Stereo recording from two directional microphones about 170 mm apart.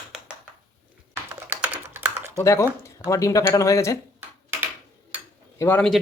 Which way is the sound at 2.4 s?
15° left (ahead or behind).